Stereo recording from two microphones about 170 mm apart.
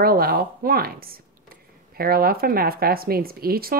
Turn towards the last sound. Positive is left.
turn(degrees=-60)  # may be behind; listen again after turning